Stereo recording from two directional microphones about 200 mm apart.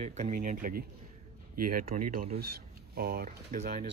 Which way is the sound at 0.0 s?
40° right (ahead or behind).